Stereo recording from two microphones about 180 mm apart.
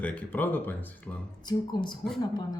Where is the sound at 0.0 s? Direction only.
5° left (ahead or behind).